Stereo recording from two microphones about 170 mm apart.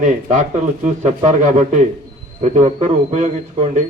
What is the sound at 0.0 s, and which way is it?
A man's voice, 45° right (ahead or behind).